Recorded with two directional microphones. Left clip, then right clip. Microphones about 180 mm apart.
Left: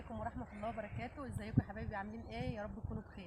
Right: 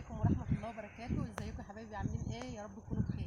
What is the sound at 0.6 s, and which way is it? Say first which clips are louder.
Speech: left 2 dB; centre (ahead or behind).